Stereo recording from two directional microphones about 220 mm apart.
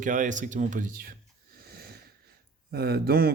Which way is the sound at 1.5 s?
45° right (ahead or behind).